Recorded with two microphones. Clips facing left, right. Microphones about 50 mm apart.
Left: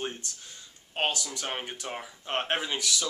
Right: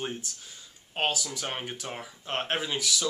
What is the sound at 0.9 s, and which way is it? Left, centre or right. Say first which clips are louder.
Speech: right 1 dB; centre.